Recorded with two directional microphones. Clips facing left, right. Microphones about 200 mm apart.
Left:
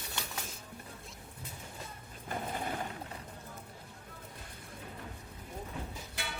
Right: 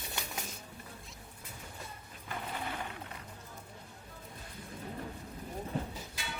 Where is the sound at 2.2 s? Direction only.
45° left (ahead or behind).